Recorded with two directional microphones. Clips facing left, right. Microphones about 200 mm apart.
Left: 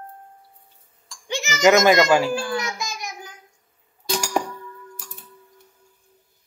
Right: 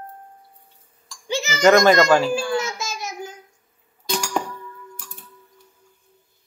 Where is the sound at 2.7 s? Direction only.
15° left (ahead or behind).